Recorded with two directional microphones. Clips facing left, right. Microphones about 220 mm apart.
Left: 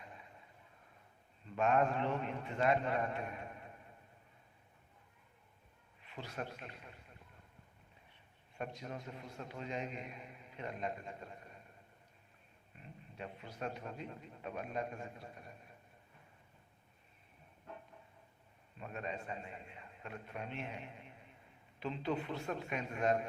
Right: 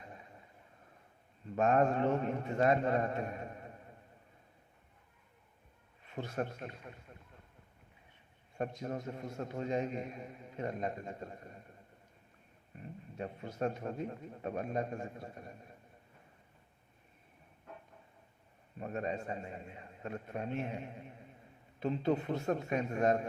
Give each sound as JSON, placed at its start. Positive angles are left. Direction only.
{"t": 1.5, "sound": "a man's voice", "side_deg": -40}
{"t": 6.1, "sound": "a man's voice", "side_deg": -45}
{"t": 8.5, "sound": "a man's voice", "side_deg": -40}
{"t": 13.1, "sound": "a man's voice", "side_deg": -40}
{"t": 18.8, "sound": "a man's voice", "side_deg": -40}
{"t": 21.8, "sound": "a man's voice", "side_deg": -45}